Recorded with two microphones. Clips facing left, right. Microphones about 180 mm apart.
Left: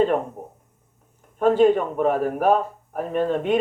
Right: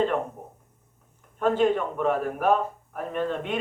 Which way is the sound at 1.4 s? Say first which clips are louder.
Left 6 dB; 40° left (ahead or behind).